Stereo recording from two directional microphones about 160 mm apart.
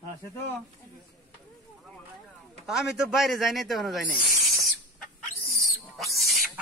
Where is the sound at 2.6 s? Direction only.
5° right (ahead or behind).